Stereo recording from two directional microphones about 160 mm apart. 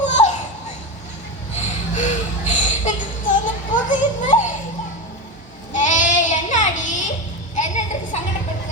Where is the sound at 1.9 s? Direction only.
50° left (ahead or behind).